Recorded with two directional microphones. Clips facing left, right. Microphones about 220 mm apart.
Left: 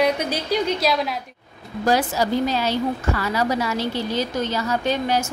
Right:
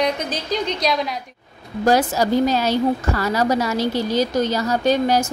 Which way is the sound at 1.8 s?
45° right (ahead or behind).